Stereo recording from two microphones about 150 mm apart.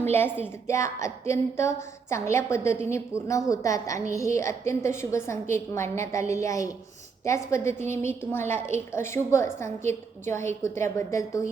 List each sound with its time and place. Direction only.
0.1 s a woman's voice: 15° left (ahead or behind)